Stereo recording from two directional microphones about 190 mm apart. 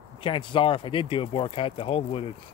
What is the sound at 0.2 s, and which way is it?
Speech, 25° left (ahead or behind).